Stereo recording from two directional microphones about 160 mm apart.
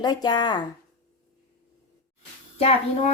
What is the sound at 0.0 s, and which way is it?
Speech, 25° left (ahead or behind).